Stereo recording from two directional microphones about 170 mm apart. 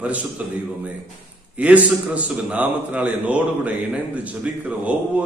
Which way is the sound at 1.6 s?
10° right (ahead or behind).